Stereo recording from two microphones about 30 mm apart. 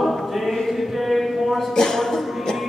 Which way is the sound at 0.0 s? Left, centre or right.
Centre.